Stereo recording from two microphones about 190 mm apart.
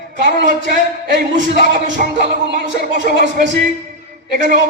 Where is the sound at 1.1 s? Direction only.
40° right (ahead or behind).